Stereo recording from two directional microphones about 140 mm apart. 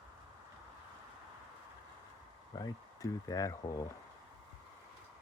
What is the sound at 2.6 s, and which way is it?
Speech, 25° left (ahead or behind).